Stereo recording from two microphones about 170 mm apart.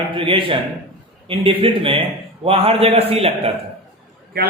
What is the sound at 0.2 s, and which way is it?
A man's voice, 30° right (ahead or behind).